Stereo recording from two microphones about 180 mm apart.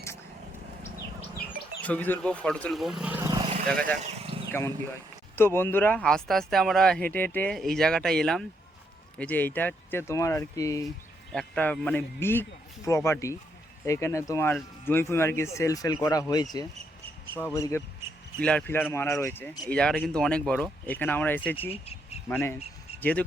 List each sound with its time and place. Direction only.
1.5 s speech: 10° left (ahead or behind)
3.2 s a sound: 20° right (ahead or behind)
3.7 s speech: 5° left (ahead or behind)
4.2 s a sound: 30° right (ahead or behind)
5.4 s a man's voice: 15° left (ahead or behind)
11.3 s a man's voice: 5° left (ahead or behind)
19.6 s a man's voice: 5° left (ahead or behind)
21.7 s a sound: 35° left (ahead or behind)
22.3 s a man's voice: 10° left (ahead or behind)